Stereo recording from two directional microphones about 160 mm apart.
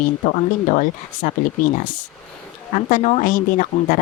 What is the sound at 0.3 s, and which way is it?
Speech, 50° left (ahead or behind).